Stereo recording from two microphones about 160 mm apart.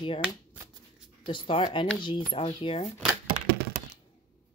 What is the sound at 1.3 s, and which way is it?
A woman's voice, 35° left (ahead or behind).